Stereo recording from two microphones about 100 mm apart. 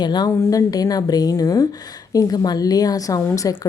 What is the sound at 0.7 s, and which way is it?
Speech, 40° left (ahead or behind).